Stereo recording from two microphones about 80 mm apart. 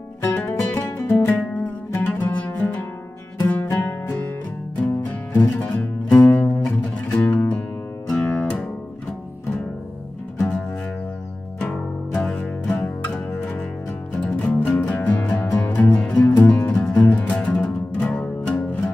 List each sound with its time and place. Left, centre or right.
0.2 s music: left
3.6 s music: left
4.7 s music: centre
12.2 s music: centre
14.1 s music: centre